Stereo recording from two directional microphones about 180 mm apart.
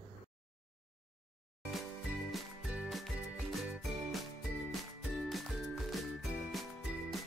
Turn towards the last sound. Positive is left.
turn(degrees=0)  # may be behind; listen again after turning